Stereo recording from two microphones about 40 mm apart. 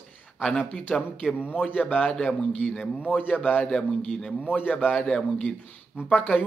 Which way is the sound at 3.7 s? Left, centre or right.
Centre.